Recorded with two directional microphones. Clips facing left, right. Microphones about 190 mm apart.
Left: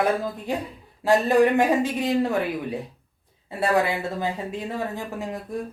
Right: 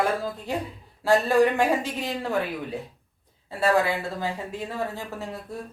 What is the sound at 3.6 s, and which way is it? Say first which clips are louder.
Speech: even; 20° left (ahead or behind).